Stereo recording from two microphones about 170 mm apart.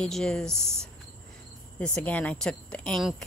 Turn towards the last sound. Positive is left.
turn(degrees=5)  # may be behind; listen again after turning